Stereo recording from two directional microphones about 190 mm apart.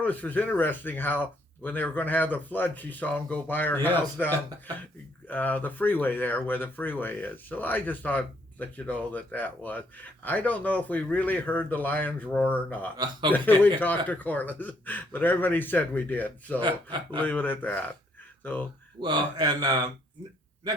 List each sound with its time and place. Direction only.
0.0 s speech: 10° left (ahead or behind)
16.6 s speech: 25° right (ahead or behind)
17.2 s speech: 10° left (ahead or behind)
18.9 s speech: 25° right (ahead or behind)